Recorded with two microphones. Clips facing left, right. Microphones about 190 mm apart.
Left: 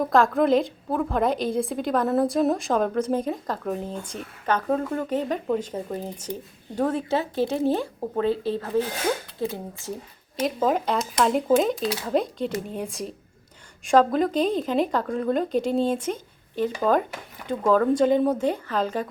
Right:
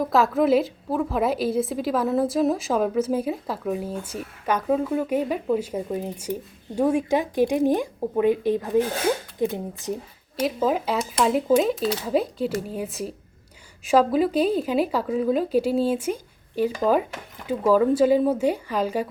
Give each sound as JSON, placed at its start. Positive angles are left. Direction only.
{"t": 0.0, "sound": "a woman's voice", "side_deg": -5}
{"t": 10.4, "sound": "a woman's voice", "side_deg": -5}